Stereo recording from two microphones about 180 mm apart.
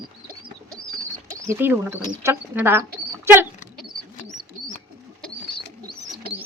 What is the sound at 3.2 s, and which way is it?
Dog, 10° right (ahead or behind).